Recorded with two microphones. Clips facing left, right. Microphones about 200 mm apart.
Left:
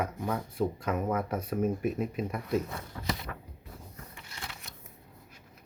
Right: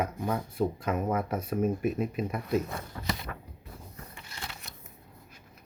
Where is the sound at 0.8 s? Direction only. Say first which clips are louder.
Right 1 dB; 5° right (ahead or behind).